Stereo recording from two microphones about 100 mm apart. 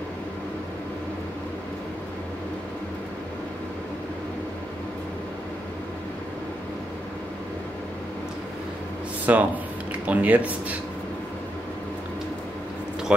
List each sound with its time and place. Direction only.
9.2 s speech: 15° right (ahead or behind)